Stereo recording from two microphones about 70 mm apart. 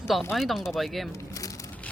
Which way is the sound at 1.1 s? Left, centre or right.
Left.